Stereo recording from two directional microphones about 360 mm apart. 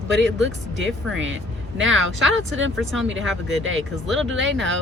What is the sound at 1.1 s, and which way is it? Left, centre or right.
Speech, right.